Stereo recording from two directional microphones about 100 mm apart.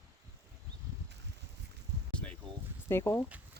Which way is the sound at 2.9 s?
25° left (ahead or behind).